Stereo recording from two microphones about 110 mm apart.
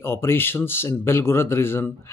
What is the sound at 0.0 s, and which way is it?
Speech, 20° left (ahead or behind).